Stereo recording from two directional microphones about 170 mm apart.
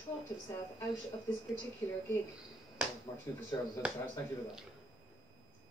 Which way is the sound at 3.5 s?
20° left (ahead or behind).